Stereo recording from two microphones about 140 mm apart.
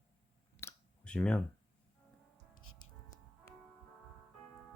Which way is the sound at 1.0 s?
5° left (ahead or behind).